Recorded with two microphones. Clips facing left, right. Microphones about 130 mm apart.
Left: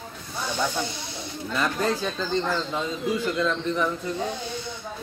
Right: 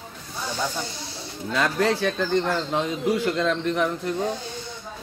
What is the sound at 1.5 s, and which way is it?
Speech, 80° right.